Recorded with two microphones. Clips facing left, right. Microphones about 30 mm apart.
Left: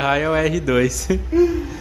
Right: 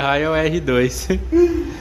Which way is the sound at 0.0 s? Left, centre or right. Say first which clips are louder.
Right 1 dB; centre.